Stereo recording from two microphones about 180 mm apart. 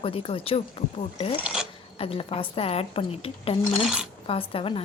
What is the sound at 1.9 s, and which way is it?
Speech, 30° left (ahead or behind).